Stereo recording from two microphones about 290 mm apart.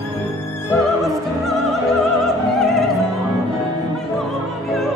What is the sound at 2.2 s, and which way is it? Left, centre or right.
Opera, centre.